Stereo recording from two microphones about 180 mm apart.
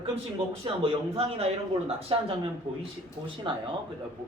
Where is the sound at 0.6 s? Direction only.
30° right (ahead or behind).